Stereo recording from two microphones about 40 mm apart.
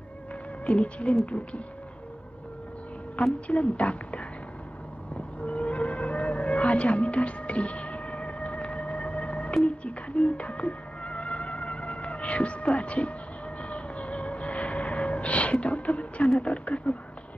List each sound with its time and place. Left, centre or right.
0.7 s a woman's voice: left
3.4 s a woman's voice: left
5.1 s a sound: left
9.7 s music: left
13.6 s a sound: left
16.3 s a woman's voice: left